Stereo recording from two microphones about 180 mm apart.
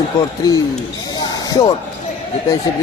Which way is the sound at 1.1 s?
20° left (ahead or behind).